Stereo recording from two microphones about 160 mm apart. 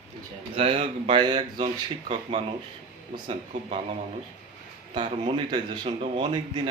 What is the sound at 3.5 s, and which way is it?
Speech, 45° right (ahead or behind).